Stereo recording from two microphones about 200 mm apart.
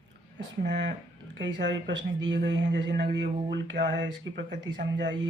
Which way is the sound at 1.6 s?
60° right (ahead or behind).